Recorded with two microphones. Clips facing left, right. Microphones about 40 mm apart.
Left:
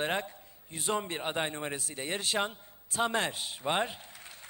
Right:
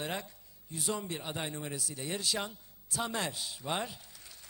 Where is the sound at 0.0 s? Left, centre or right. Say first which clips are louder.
Left 6 dB; left.